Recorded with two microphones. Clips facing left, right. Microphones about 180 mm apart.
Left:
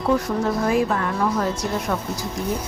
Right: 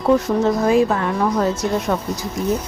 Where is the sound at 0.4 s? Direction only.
25° right (ahead or behind).